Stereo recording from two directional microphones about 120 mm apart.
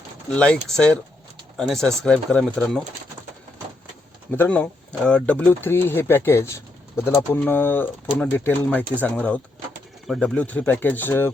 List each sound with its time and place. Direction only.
0.3 s speech: 10° left (ahead or behind)
4.3 s speech: 15° left (ahead or behind)